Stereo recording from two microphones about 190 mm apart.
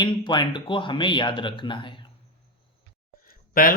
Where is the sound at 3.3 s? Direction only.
50° left (ahead or behind).